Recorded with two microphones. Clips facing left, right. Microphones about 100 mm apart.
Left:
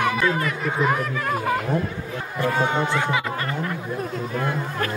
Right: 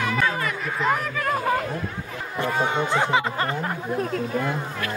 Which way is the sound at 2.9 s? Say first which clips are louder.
Right 2 dB; 30° right (ahead or behind).